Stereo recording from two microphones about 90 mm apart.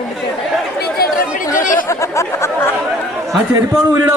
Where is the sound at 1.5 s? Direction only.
35° left (ahead or behind).